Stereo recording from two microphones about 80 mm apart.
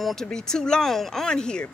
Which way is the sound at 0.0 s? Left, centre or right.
Centre.